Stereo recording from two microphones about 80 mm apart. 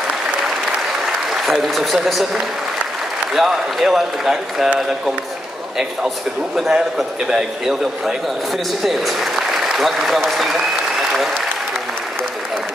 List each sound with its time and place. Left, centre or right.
1.3 s a man's voice: centre
3.3 s a man's voice: centre